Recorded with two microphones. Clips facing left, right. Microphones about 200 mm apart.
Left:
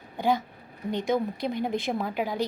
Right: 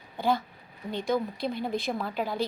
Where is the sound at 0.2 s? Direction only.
15° left (ahead or behind).